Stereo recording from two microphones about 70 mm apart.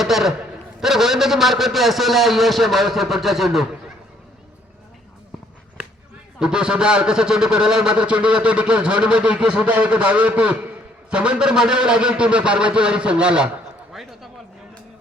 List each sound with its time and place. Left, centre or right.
0.0 s a man's voice: centre
6.4 s a man's voice: centre
13.9 s a sound: centre